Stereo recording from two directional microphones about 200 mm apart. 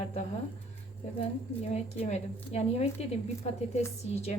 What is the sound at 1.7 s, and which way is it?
Speech, 35° left (ahead or behind).